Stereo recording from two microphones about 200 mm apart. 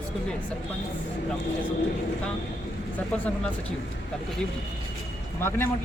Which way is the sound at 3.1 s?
5° left (ahead or behind).